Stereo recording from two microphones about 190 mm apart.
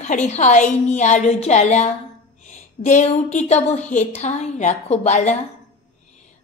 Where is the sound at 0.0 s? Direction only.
40° left (ahead or behind).